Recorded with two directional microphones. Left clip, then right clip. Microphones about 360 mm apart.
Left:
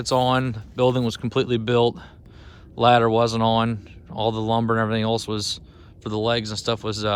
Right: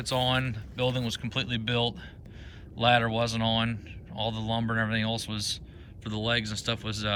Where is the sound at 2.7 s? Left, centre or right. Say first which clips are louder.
Left 8 dB; centre.